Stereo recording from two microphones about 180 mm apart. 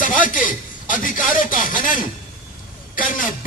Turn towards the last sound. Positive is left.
turn(degrees=50)  # may be behind; listen again after turning